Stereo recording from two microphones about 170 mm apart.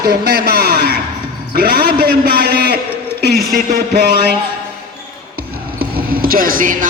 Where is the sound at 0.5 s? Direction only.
70° right (ahead or behind).